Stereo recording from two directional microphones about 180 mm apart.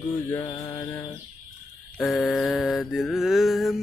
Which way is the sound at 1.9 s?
5° left (ahead or behind).